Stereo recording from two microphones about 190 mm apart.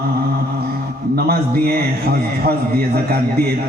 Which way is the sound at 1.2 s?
55° right (ahead or behind).